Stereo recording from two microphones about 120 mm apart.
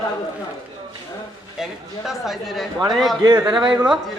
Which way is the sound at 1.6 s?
Centre (ahead or behind).